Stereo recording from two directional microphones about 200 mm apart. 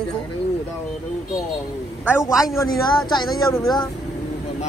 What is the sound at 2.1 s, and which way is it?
Speech, 15° left (ahead or behind).